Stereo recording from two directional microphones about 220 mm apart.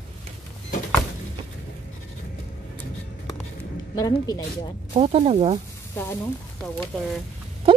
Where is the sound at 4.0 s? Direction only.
15° left (ahead or behind).